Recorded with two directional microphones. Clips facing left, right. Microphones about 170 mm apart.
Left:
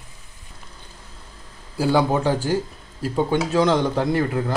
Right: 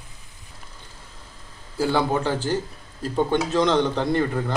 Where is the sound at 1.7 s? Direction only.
10° left (ahead or behind).